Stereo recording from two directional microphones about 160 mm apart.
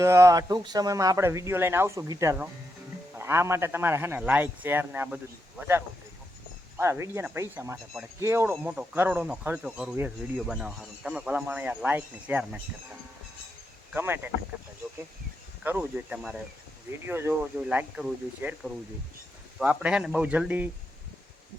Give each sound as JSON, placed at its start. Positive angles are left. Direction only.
{"t": 0.0, "sound": "speech", "side_deg": -20}
{"t": 13.9, "sound": "speech", "side_deg": -15}
{"t": 15.6, "sound": "speech", "side_deg": -10}